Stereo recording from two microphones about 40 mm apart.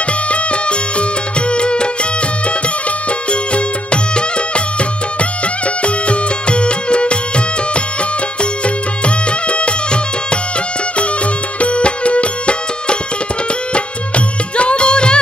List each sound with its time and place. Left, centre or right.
0.3 s music: left
3.1 s music: left
11.6 s music: left